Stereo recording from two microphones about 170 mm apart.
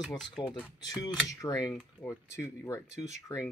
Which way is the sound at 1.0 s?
20° left (ahead or behind).